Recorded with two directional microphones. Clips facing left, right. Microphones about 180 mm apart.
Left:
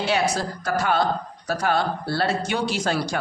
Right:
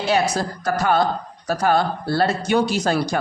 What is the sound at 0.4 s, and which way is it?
Speech, 45° right (ahead or behind).